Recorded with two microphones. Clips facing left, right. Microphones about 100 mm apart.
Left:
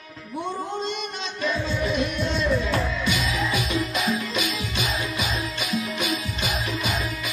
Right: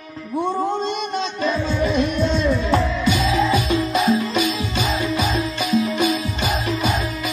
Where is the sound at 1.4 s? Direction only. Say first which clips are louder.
Right 2 dB; 30° right (ahead or behind).